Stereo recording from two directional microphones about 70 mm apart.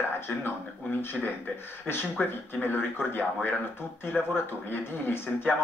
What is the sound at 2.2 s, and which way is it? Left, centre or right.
Speech, centre.